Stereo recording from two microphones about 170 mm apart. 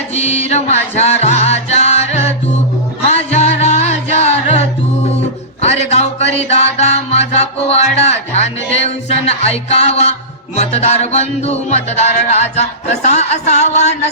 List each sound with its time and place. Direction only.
0.1 s music: 40° left (ahead or behind)
5.6 s a sound: 40° left (ahead or behind)
6.7 s music: 40° left (ahead or behind)